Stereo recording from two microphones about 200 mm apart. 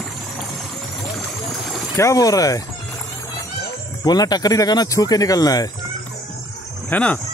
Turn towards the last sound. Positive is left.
turn(degrees=10)  # may be behind; listen again after turning